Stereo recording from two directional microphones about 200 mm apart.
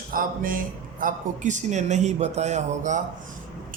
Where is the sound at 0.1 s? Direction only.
45° right (ahead or behind).